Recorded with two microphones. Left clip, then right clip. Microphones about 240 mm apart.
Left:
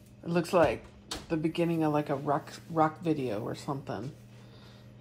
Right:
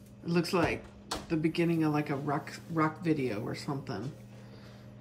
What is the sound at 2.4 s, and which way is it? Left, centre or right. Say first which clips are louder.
Speech: left 3 dB; left.